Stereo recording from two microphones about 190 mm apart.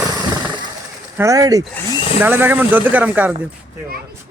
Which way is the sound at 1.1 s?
15° right (ahead or behind).